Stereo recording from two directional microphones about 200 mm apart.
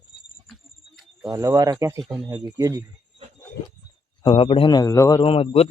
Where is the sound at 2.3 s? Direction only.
20° right (ahead or behind).